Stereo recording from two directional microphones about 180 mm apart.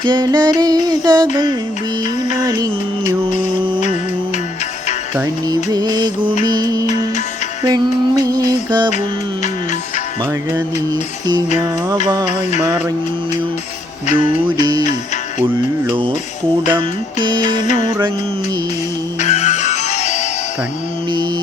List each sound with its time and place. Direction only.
0.0 s mantra: 25° right (ahead or behind)
2.4 s mantra: 25° right (ahead or behind)
3.2 s a sound: 30° right (ahead or behind)
5.1 s music: 15° right (ahead or behind)
5.7 s mantra: 25° right (ahead or behind)
6.4 s music: 20° right (ahead or behind)
14.2 s music: 25° right (ahead or behind)
16.6 s mantra: 25° right (ahead or behind)
19.2 s music: 40° left (ahead or behind)